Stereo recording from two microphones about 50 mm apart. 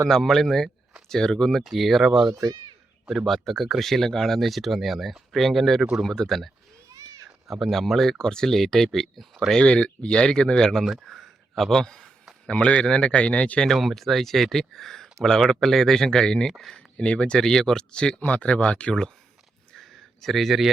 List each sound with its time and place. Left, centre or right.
0.0 s speech: centre
1.6 s speech: centre
7.5 s speech: centre
9.6 s speech: left
10.9 s a sound: centre
12.5 s a man's voice: left
13.7 s speech: centre
16.5 s speech: centre
16.7 s speech: left
18.2 s a man's voice: left
19.7 s a sound: centre